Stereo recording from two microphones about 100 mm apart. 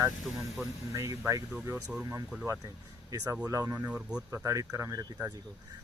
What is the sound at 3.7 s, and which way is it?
Speech, 15° right (ahead or behind).